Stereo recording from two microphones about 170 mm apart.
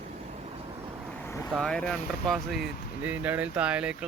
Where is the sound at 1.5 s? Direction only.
5° left (ahead or behind).